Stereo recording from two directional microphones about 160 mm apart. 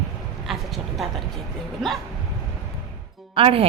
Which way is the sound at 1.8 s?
Centre (ahead or behind).